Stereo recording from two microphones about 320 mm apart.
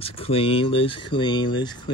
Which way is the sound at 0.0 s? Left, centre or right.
Centre.